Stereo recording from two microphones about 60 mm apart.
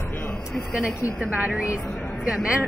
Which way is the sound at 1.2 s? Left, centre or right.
Right.